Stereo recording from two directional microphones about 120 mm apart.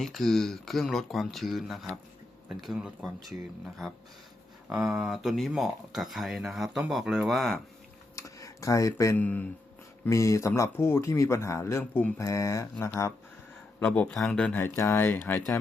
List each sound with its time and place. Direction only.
0.0 s speech: centre (ahead or behind)
4.7 s speech: 5° right (ahead or behind)
8.1 s a sound: 25° left (ahead or behind)
9.1 s speech: 15° left (ahead or behind)
10.1 s speech: 25° left (ahead or behind)
13.7 s speech: 10° left (ahead or behind)